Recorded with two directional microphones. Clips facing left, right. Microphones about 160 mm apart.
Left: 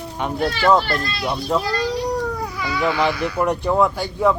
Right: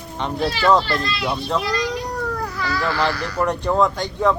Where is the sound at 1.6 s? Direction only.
30° left (ahead or behind).